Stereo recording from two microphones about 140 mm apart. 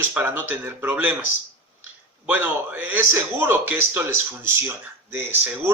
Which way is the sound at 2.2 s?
10° right (ahead or behind).